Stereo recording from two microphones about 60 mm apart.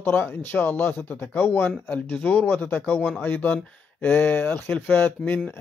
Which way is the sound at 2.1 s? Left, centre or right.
Left.